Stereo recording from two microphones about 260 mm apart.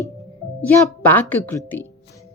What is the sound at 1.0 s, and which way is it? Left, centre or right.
Speech, centre.